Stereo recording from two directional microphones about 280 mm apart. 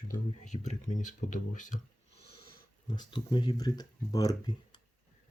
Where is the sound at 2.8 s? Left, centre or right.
Centre.